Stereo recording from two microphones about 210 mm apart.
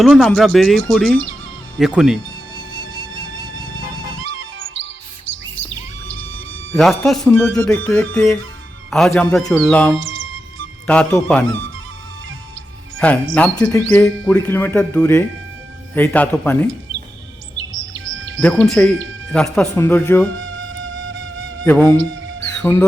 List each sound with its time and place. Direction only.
0.0 s speech: centre (ahead or behind)
6.1 s a sound: 65° right (ahead or behind)
6.7 s speech: centre (ahead or behind)
10.0 s music: 65° right (ahead or behind)
10.8 s speech: 5° left (ahead or behind)
13.3 s speech: 5° left (ahead or behind)
17.7 s bird vocalization: 65° right (ahead or behind)
18.3 s speech: 5° left (ahead or behind)
20.3 s music: 65° right (ahead or behind)
21.6 s speech: 10° left (ahead or behind)